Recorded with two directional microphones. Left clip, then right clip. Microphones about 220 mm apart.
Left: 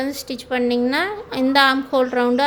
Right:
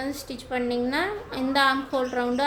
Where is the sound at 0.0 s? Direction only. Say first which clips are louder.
Left 7 dB; 35° left (ahead or behind).